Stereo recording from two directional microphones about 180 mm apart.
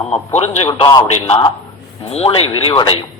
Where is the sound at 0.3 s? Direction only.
35° left (ahead or behind).